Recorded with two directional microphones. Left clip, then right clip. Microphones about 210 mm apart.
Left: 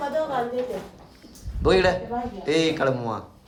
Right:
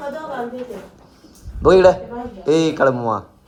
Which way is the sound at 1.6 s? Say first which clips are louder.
Right 9 dB; centre (ahead or behind).